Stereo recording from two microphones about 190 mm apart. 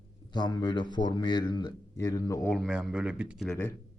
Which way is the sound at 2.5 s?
Centre (ahead or behind).